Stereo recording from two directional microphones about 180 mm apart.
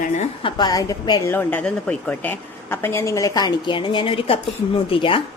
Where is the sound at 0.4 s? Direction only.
25° left (ahead or behind).